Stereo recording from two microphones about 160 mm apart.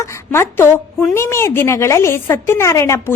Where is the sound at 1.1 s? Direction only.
15° left (ahead or behind).